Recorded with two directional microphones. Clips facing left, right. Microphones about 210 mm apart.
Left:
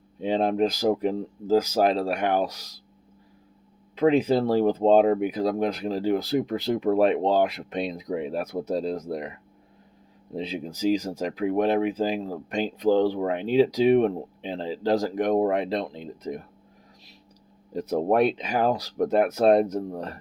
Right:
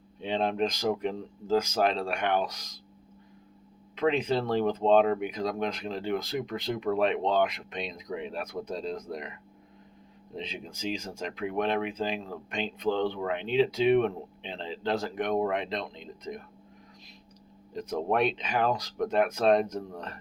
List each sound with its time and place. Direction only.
0.2 s speech: 40° left (ahead or behind)
3.9 s speech: 35° left (ahead or behind)
17.7 s speech: 35° left (ahead or behind)